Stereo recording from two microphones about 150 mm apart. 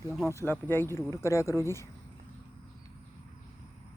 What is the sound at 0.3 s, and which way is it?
Speech, 15° left (ahead or behind).